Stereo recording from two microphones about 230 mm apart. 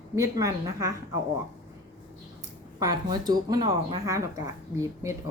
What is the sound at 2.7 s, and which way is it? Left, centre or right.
Speech, centre.